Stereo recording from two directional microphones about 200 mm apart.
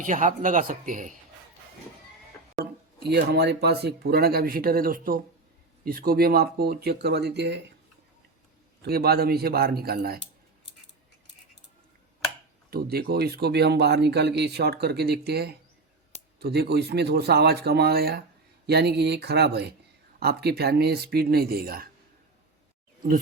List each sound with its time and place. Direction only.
0.0 s speech: 40° right (ahead or behind)
2.6 s speech: 55° right (ahead or behind)
8.8 s speech: 50° right (ahead or behind)
12.7 s speech: 50° right (ahead or behind)